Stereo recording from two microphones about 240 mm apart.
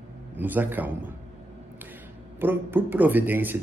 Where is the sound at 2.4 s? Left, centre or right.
Centre.